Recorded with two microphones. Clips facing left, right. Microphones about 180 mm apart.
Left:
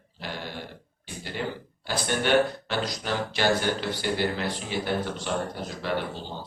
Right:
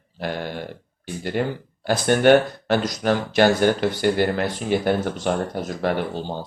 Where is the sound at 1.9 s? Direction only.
50° right (ahead or behind).